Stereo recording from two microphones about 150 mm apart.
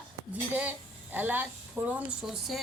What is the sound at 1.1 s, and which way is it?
A woman's voice, 10° right (ahead or behind).